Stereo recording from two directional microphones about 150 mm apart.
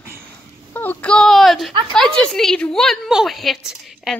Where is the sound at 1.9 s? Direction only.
5° left (ahead or behind).